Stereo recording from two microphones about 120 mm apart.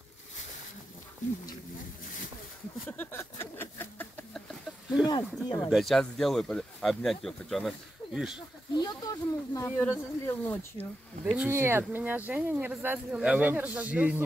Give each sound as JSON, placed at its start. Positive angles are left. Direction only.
{"t": 2.9, "sound": "a sound", "side_deg": 15}
{"t": 5.0, "sound": "speech", "side_deg": 35}
{"t": 5.7, "sound": "speech", "side_deg": 0}
{"t": 8.7, "sound": "speech", "side_deg": 35}
{"t": 11.3, "sound": "speech", "side_deg": -20}